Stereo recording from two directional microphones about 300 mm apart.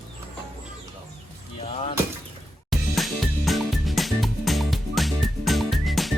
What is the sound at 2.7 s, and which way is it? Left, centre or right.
Music, centre.